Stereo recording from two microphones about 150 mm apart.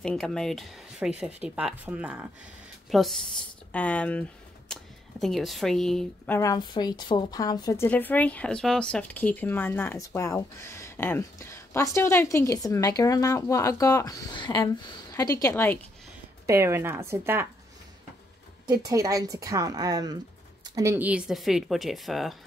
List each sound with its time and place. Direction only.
0.0 s a woman's voice: 5° left (ahead or behind)
6.3 s a woman's voice: 25° left (ahead or behind)
15.5 s speech: 15° left (ahead or behind)
16.4 s a woman's voice: 20° right (ahead or behind)
18.7 s a woman's voice: 25° right (ahead or behind); by 22.4 s centre (ahead or behind)